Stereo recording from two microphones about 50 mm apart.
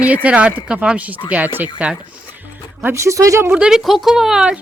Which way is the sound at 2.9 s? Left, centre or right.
Right.